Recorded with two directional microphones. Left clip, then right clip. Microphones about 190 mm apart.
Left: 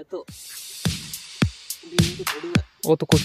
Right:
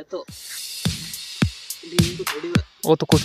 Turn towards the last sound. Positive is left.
turn(degrees=0)  # may be behind; listen again after turning